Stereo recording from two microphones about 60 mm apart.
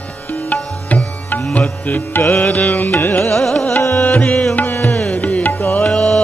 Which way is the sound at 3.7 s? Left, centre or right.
Left.